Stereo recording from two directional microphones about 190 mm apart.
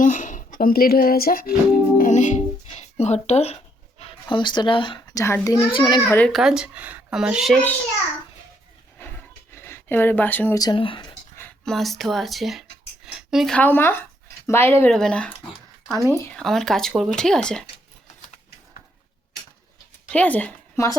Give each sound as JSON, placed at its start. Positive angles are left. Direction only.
{"t": 0.0, "sound": "speech", "side_deg": 40}
{"t": 6.1, "sound": "speech", "side_deg": 0}
{"t": 9.0, "sound": "a sound", "side_deg": 10}
{"t": 10.6, "sound": "speech", "side_deg": 25}
{"t": 11.3, "sound": "speech", "side_deg": 0}
{"t": 20.1, "sound": "speech", "side_deg": 5}